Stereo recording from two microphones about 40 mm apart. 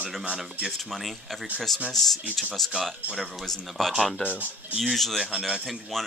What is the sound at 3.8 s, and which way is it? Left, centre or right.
Speech, centre.